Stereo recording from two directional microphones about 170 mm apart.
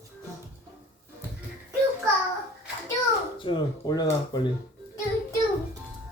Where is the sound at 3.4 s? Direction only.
25° left (ahead or behind).